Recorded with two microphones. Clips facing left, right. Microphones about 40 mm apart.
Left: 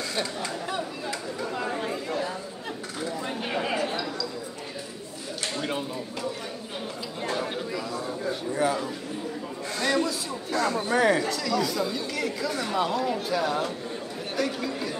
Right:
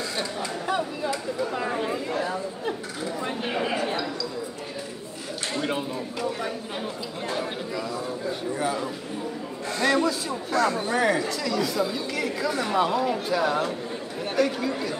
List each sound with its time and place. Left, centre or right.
0.1 s chatter: centre
2.1 s chatter: right
3.2 s a sound: centre
5.6 s speech: centre
7.2 s speech: centre